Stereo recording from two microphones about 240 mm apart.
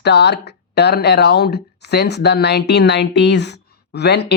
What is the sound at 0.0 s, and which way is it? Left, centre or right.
Speech, left.